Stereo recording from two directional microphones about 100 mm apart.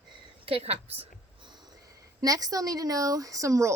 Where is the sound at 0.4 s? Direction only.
80° right.